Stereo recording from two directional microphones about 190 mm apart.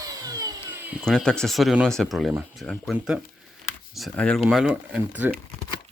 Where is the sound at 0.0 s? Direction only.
20° right (ahead or behind).